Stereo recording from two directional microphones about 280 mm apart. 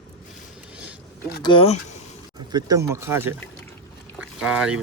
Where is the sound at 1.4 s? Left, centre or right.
Centre.